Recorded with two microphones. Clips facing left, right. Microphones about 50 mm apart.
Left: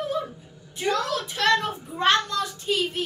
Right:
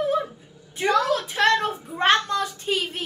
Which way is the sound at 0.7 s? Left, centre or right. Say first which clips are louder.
Right 4 dB; right.